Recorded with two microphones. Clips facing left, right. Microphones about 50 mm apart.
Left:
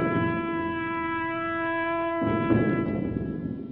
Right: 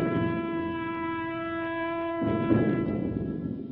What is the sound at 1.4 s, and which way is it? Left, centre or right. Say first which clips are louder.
Music: left 3 dB; centre.